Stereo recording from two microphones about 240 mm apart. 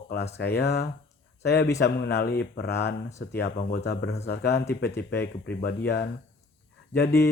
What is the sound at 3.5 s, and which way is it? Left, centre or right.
Speech, left.